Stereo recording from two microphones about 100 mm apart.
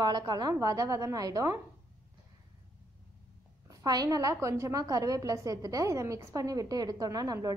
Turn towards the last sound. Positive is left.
turn(degrees=-40)  # may be behind; listen again after turning